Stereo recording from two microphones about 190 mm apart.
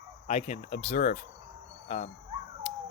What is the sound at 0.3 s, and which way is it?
Speech, 35° left (ahead or behind).